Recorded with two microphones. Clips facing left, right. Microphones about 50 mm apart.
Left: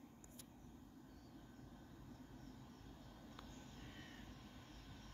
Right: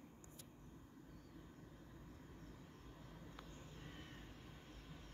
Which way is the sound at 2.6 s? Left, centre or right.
Centre.